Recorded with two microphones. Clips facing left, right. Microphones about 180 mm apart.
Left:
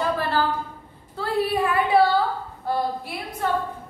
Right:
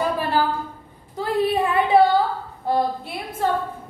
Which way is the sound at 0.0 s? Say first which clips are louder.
Right 2 dB; 15° right (ahead or behind).